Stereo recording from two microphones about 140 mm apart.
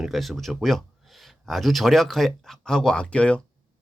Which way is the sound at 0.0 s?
Centre (ahead or behind).